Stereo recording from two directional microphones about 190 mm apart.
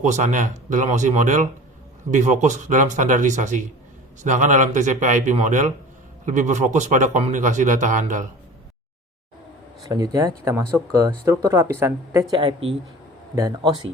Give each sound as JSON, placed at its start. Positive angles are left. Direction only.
{"t": 0.0, "sound": "speech", "side_deg": -40}
{"t": 9.8, "sound": "speech", "side_deg": -20}
{"t": 12.3, "sound": "speech", "side_deg": -25}